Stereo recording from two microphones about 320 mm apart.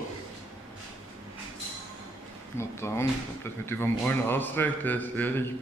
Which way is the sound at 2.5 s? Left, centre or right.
Centre.